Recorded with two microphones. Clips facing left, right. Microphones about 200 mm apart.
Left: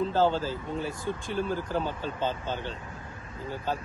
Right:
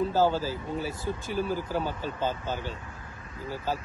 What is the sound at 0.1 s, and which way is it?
Speech, 10° right (ahead or behind).